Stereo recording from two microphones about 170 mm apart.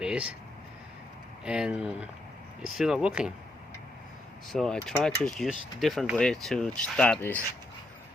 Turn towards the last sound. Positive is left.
turn(degrees=10)  # may be behind; listen again after turning